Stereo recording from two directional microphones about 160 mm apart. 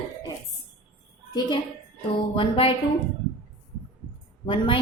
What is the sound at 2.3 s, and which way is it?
Speech, 35° left (ahead or behind).